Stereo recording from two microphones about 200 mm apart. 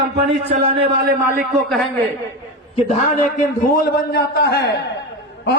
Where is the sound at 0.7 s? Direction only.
50° right (ahead or behind).